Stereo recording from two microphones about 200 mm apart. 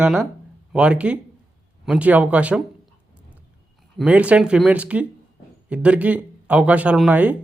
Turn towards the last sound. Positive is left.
turn(degrees=-10)  # may be behind; listen again after turning